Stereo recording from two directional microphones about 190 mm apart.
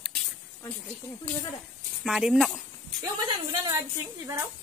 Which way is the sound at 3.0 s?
20° right (ahead or behind).